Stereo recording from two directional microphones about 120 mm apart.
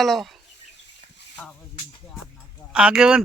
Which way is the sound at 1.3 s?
10° left (ahead or behind).